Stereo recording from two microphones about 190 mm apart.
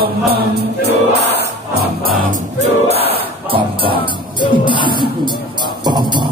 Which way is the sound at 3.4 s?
25° right (ahead or behind).